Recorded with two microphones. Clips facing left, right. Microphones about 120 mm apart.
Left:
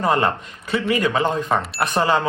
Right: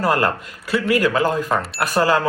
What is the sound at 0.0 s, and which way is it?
Speech, 5° right (ahead or behind).